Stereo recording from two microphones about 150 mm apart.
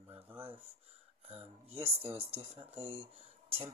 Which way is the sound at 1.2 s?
45° right (ahead or behind).